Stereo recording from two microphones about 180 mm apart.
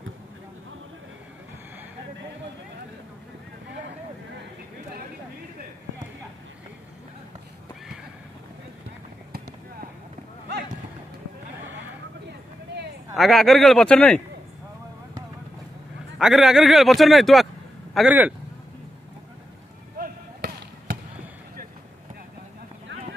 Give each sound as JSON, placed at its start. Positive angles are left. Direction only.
{"t": 13.1, "sound": "a man's voice", "side_deg": 0}
{"t": 16.2, "sound": "a man's voice", "side_deg": -5}
{"t": 20.0, "sound": "basketball bounce", "side_deg": -55}